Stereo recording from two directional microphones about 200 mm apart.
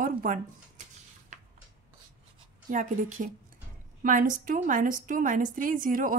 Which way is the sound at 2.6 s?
40° right (ahead or behind).